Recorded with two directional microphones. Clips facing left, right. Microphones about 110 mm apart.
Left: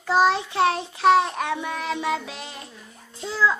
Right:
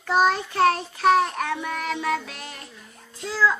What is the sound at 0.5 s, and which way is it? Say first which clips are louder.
Child singing: right 1 dB; 20° left (ahead or behind).